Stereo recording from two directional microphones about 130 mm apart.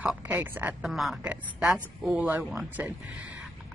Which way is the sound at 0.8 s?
Centre (ahead or behind).